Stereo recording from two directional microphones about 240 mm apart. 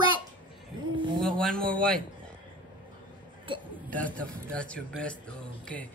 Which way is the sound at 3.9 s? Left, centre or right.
Centre.